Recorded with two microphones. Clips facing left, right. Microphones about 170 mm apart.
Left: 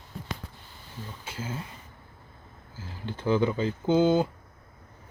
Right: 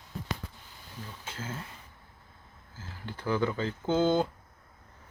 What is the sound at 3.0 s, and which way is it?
Speech, 20° left (ahead or behind).